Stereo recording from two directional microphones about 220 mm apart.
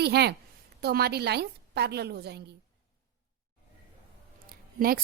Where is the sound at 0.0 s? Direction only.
50° right (ahead or behind).